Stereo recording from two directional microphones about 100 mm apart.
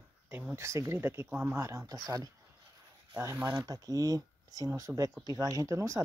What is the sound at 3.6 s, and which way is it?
Speech, 40° right (ahead or behind).